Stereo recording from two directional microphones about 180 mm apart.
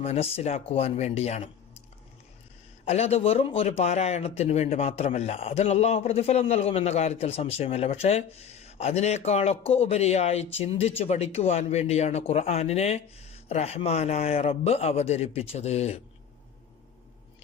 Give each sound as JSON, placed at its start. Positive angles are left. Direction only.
{"t": 0.0, "sound": "speech", "side_deg": 35}
{"t": 2.8, "sound": "speech", "side_deg": 35}